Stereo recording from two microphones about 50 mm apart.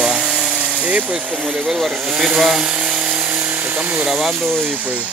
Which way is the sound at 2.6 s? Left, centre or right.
Centre.